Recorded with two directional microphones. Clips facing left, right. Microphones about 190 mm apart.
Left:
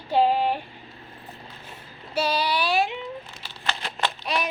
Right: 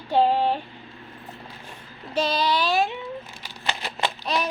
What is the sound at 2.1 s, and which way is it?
Child singing, 10° left (ahead or behind).